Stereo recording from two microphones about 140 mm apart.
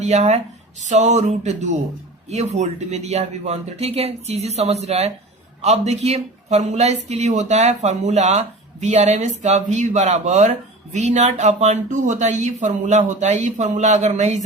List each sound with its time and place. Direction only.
0.0 s speech: 55° right (ahead or behind)